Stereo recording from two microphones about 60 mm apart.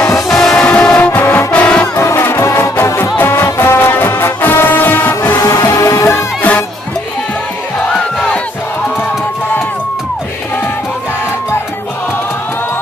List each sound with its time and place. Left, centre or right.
0.3 s music: centre
0.6 s music: centre
1.1 s brass instrument: left
1.5 s music: centre
2.0 s music: left
3.0 s music: left
5.4 s music: left